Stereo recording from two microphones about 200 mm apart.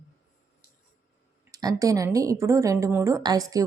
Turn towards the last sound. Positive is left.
turn(degrees=-20)  # may be behind; listen again after turning